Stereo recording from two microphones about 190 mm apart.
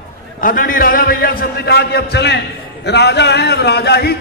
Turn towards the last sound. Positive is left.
turn(degrees=60)  # may be behind; listen again after turning